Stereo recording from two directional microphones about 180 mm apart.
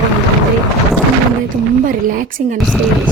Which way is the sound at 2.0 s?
50° right (ahead or behind).